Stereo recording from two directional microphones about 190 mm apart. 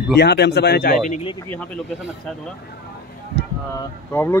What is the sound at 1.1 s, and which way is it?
Speech, 30° left (ahead or behind).